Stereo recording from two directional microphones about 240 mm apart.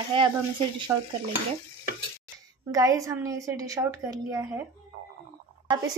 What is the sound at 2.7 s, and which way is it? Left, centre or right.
A woman's voice, centre.